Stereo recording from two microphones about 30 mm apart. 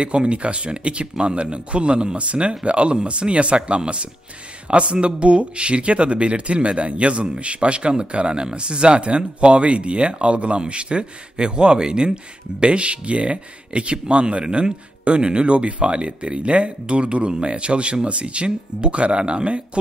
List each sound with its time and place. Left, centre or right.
0.0 s speech: right